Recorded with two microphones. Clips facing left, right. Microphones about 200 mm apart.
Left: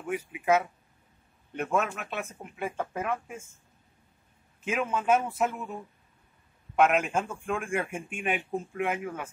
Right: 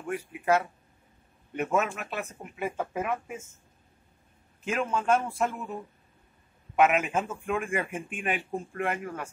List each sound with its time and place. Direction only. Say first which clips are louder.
0.0 s a man's voice: even; 5° left (ahead or behind)
4.6 s a man's voice: even; 5° left (ahead or behind)